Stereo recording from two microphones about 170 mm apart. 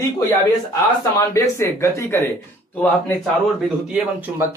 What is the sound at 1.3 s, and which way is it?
Speech, 15° left (ahead or behind).